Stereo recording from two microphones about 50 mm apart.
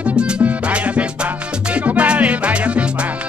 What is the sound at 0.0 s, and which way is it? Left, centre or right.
Music, right.